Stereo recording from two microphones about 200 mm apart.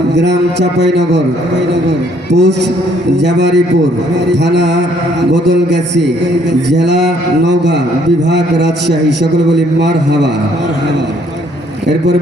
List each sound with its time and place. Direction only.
0.2 s speech: 60° right (ahead or behind)
2.3 s speech: 60° right (ahead or behind)